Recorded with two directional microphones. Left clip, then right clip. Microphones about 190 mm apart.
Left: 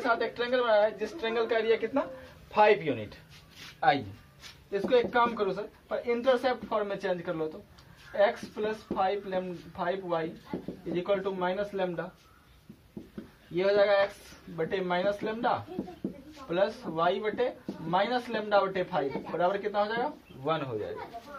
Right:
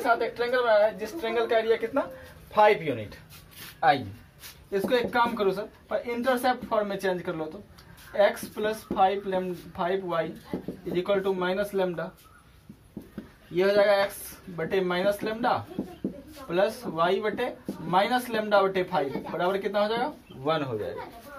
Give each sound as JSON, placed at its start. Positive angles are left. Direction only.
{"t": 0.0, "sound": "speech", "side_deg": 25}
{"t": 3.5, "sound": "a sound", "side_deg": 15}
{"t": 4.7, "sound": "speech", "side_deg": 10}
{"t": 13.6, "sound": "a man's voice", "side_deg": 10}